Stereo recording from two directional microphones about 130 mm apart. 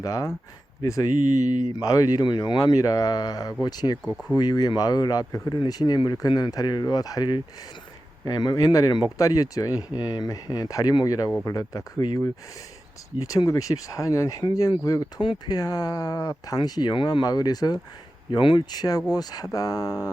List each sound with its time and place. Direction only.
0.0 s speech: 25° left (ahead or behind)
1.1 s speech: 90° right
1.8 s speech: 25° left (ahead or behind)
4.0 s speech: 5° left (ahead or behind)
4.4 s speech: 30° left (ahead or behind)
13.2 s speech: 25° left (ahead or behind)